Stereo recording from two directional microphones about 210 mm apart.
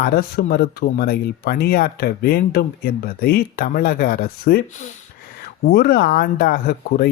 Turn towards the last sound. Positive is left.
turn(degrees=45)  # may be behind; listen again after turning